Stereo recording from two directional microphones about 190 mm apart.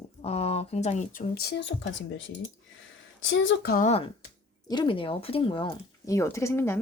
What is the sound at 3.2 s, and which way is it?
Speech, 85° left.